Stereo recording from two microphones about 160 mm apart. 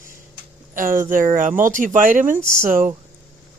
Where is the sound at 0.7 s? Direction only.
55° right (ahead or behind).